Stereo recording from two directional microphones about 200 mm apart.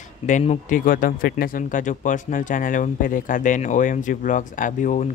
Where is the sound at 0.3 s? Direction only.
35° left (ahead or behind).